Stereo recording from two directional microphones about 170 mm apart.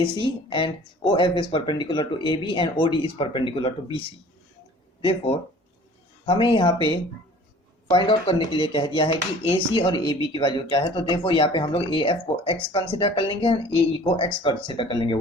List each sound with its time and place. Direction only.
0.0 s speech: 30° left (ahead or behind)
5.0 s speech: 35° left (ahead or behind)